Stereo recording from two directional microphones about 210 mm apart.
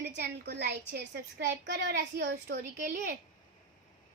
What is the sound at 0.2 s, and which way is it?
A woman's voice, 50° right (ahead or behind).